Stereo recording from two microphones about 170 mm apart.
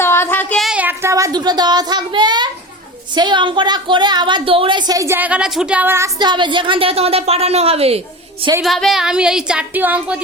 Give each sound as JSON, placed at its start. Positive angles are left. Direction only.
{"t": 0.0, "sound": "child singing", "side_deg": 15}
{"t": 0.6, "sound": "a child's voice", "side_deg": -5}
{"t": 6.1, "sound": "a woman's voice", "side_deg": -25}
{"t": 8.6, "sound": "speech", "side_deg": 0}